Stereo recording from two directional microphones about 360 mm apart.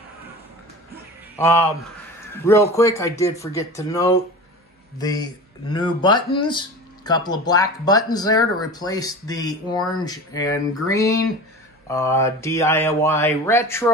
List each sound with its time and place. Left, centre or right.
1.4 s speech: centre